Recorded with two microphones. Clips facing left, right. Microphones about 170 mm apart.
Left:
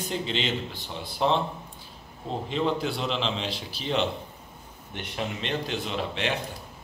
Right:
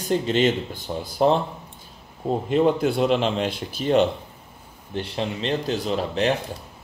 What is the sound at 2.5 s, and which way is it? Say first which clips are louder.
Speech: right 7 dB; 50° right (ahead or behind).